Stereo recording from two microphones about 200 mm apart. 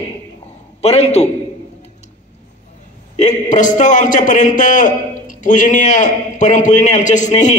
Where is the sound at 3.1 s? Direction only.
35° left (ahead or behind).